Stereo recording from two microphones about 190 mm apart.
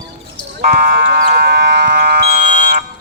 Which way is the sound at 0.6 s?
55° right (ahead or behind).